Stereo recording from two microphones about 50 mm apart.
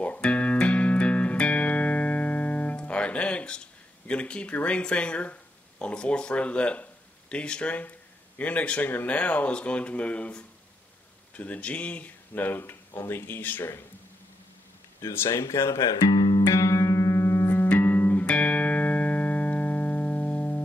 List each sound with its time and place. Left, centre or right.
0.0 s music: left
4.1 s speech: left
12.9 s speech: left
15.2 s speech: left
16.4 s music: left
17.6 s music: left
18.3 s electronic tuner: left